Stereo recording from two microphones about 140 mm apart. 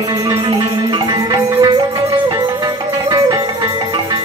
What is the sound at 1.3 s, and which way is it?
Music, 25° right (ahead or behind).